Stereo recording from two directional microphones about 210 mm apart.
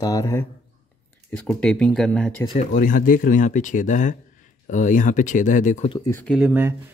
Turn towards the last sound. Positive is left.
turn(degrees=-5)  # may be behind; listen again after turning